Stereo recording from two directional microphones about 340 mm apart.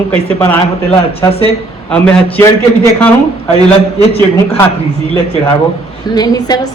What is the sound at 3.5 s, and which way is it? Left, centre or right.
Speech, centre.